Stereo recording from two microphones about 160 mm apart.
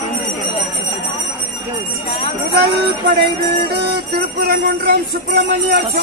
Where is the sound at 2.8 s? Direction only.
80° right.